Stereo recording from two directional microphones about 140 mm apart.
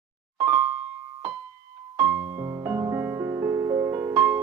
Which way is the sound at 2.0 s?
20° right (ahead or behind).